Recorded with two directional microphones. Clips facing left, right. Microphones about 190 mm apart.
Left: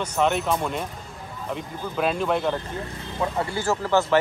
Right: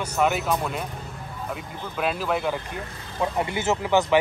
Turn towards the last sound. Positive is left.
turn(degrees=-15)  # may be behind; listen again after turning